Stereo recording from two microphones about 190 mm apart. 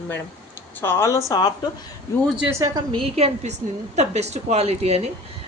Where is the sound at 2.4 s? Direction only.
15° right (ahead or behind).